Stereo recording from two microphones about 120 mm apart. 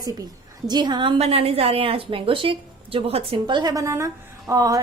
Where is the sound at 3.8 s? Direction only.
25° right (ahead or behind).